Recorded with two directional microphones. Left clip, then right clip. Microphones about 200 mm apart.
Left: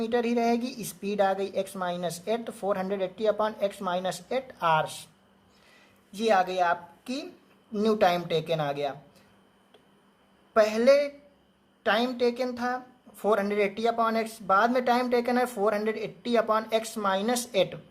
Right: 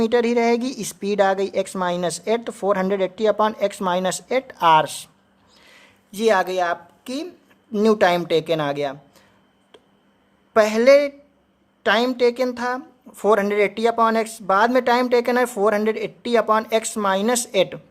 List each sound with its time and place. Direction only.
0.0 s speech: 35° right (ahead or behind)
6.1 s speech: 40° right (ahead or behind)
10.5 s speech: 35° right (ahead or behind)